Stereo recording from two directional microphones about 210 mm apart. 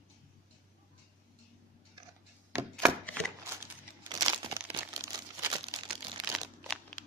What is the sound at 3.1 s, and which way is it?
Crumpling, 15° right (ahead or behind).